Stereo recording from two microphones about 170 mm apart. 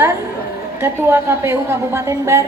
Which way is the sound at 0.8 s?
15° right (ahead or behind).